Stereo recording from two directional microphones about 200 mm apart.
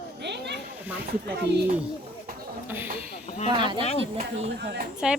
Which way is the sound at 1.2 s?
55° right (ahead or behind).